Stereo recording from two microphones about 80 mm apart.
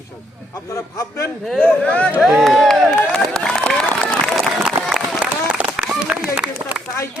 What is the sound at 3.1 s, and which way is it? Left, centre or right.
Crowd, centre.